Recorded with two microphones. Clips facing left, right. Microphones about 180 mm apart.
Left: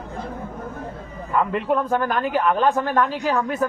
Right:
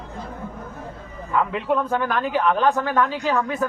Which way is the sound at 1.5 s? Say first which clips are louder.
Left 1 dB; centre (ahead or behind).